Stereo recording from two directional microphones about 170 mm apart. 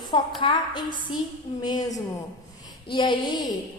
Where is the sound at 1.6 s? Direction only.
25° left (ahead or behind).